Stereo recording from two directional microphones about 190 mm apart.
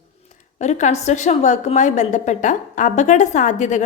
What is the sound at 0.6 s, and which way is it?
A woman's voice, 35° left (ahead or behind).